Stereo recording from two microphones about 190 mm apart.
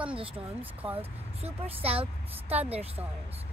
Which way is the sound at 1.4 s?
30° right (ahead or behind).